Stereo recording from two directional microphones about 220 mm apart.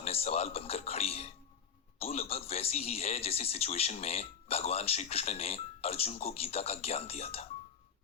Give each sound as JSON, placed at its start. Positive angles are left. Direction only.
{"t": 0.0, "sound": "a man's voice", "side_deg": 25}